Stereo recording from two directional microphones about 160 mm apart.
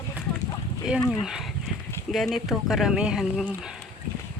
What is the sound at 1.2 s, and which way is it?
Speech, 5° right (ahead or behind).